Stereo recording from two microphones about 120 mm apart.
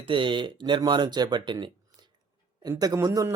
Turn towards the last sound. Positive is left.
turn(degrees=-25)  # may be behind; listen again after turning